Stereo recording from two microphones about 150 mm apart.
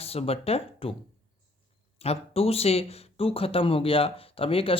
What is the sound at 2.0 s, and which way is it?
Speech, 40° left (ahead or behind).